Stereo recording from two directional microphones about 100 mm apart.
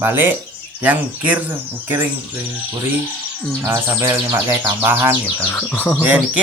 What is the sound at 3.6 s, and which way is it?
Bird, 30° right (ahead or behind).